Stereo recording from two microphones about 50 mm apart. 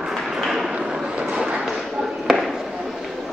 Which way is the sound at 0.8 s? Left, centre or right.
Centre.